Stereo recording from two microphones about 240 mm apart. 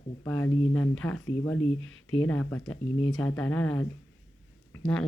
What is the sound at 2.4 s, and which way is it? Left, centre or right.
Speech, centre.